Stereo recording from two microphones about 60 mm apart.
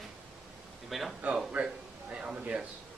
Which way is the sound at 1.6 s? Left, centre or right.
Right.